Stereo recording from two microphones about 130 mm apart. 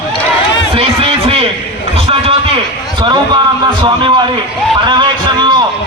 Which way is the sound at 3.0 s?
35° right (ahead or behind).